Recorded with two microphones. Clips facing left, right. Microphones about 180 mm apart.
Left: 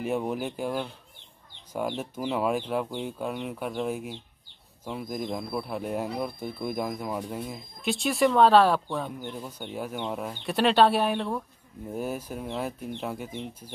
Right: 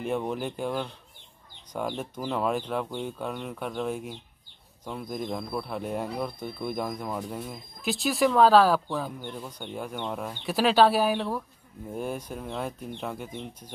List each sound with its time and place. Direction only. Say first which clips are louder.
0.0 s speech: left 1 dB; 5° left (ahead or behind)